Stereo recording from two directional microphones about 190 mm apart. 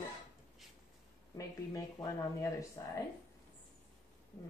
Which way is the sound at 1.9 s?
15° left (ahead or behind).